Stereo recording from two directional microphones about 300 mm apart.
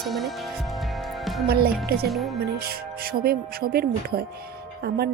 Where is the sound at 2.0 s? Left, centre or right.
Centre.